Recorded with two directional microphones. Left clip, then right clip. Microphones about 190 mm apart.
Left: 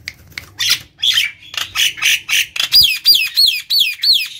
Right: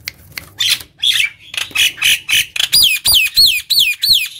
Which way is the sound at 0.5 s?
Centre (ahead or behind).